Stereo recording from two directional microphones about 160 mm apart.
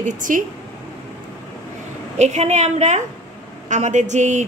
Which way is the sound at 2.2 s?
45° right (ahead or behind).